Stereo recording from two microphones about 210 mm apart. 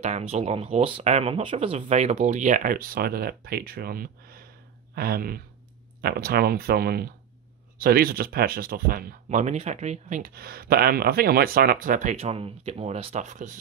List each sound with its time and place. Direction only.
0.0 s speech: 30° right (ahead or behind)